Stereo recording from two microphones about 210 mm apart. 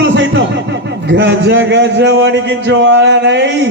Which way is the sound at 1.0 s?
55° right (ahead or behind).